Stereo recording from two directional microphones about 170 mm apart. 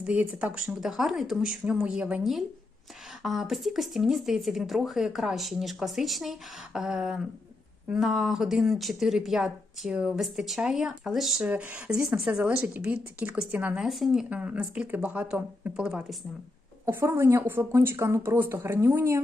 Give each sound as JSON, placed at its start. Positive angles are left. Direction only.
{"t": 0.0, "sound": "speech", "side_deg": -10}
{"t": 16.8, "sound": "speech", "side_deg": -15}